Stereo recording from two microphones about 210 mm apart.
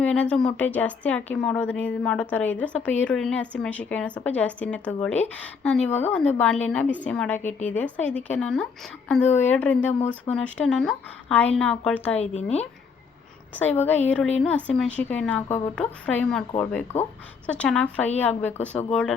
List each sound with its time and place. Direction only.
0.0 s a woman's voice: 5° left (ahead or behind)
12.2 s speech: 30° left (ahead or behind)
13.7 s a woman's voice: 10° left (ahead or behind)